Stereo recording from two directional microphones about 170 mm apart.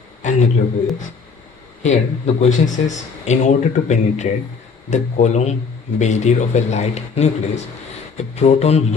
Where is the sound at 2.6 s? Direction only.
45° left (ahead or behind).